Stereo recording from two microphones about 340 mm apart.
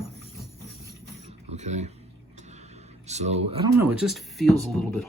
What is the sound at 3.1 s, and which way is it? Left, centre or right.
Speech, centre.